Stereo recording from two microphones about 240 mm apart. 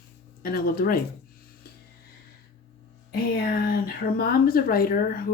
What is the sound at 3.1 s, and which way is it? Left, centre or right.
Speech, left.